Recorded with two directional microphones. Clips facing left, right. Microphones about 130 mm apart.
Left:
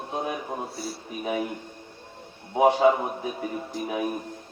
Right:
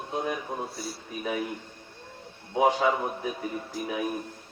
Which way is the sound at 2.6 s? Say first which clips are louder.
Left 4 dB; 25° left (ahead or behind).